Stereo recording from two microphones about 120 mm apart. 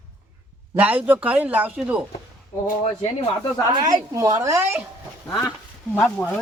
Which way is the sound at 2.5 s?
20° left (ahead or behind).